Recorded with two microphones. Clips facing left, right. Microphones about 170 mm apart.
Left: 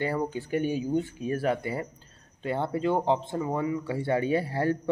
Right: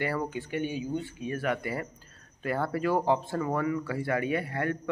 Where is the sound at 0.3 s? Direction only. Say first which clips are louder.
Left 4 dB; 35° left (ahead or behind).